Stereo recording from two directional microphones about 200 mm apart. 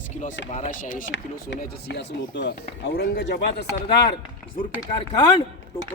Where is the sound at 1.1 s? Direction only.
60° left (ahead or behind).